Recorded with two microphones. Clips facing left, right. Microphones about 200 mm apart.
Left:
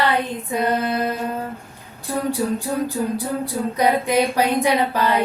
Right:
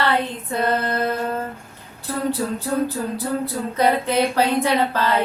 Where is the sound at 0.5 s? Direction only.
10° left (ahead or behind).